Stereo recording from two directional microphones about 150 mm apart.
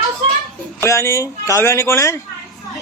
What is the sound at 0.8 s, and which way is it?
A man's voice, 20° left (ahead or behind).